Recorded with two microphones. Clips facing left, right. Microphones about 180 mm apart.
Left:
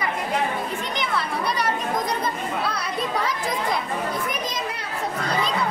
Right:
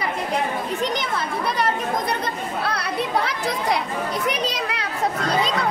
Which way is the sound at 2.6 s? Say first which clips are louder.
Right 2 dB; 65° right (ahead or behind).